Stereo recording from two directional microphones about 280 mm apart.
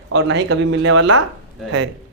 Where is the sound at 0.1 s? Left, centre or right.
Right.